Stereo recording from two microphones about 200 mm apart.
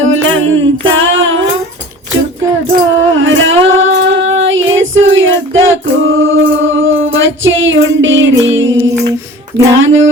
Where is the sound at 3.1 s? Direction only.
75° right (ahead or behind).